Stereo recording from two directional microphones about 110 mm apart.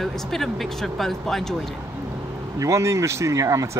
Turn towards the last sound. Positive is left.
turn(degrees=-30)  # may be behind; listen again after turning